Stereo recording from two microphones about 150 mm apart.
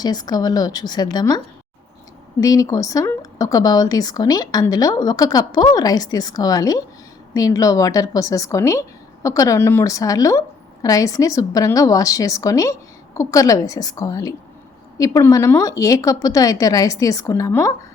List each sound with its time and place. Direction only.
0.0 s a woman's voice: 25° left (ahead or behind)
2.4 s a woman's voice: 25° left (ahead or behind)